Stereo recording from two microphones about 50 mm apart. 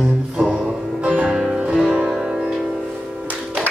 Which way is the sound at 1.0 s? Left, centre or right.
Right.